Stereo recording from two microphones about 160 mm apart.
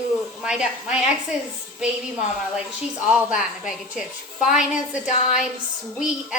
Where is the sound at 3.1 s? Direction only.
5° right (ahead or behind).